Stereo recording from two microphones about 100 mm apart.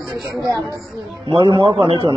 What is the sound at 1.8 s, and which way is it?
Speech, 70° right (ahead or behind).